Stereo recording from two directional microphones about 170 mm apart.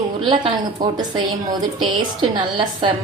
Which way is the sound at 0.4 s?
25° right (ahead or behind).